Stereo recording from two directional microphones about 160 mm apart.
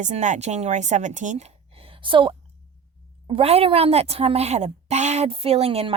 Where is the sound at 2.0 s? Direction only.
30° right (ahead or behind).